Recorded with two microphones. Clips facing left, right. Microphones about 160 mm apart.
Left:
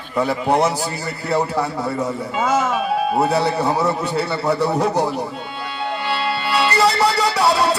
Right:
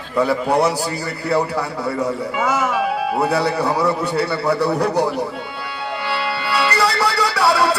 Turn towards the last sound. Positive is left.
turn(degrees=20)  # may be behind; listen again after turning